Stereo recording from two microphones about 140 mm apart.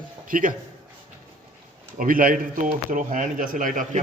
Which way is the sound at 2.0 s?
85° right.